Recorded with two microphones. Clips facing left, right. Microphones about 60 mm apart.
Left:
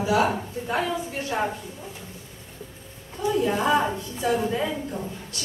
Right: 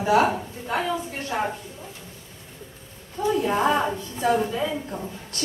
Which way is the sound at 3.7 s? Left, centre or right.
Centre.